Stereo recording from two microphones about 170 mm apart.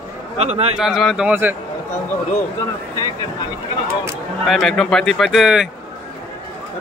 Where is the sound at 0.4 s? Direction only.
35° right (ahead or behind).